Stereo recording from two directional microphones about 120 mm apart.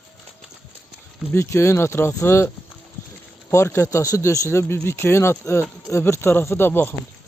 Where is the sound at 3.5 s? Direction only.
25° left (ahead or behind).